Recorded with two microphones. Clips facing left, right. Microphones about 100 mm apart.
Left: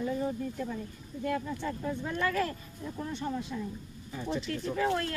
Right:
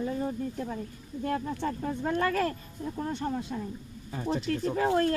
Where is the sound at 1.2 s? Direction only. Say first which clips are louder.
Right 2 dB; 45° right (ahead or behind).